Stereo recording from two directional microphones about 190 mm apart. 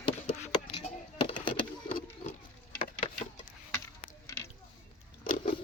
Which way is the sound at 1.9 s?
45° left (ahead or behind).